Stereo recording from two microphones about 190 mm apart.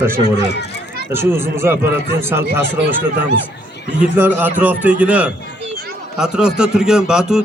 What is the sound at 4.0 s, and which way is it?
A man's voice, 10° right (ahead or behind).